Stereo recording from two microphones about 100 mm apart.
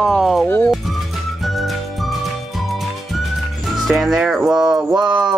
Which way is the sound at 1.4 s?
Centre (ahead or behind).